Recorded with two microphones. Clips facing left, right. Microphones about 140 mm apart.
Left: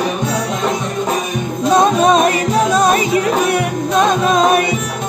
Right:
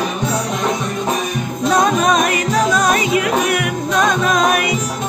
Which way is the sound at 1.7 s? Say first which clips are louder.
Left 3 dB; 25° left (ahead or behind).